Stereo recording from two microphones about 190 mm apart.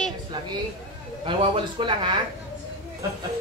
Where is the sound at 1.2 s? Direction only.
25° right (ahead or behind).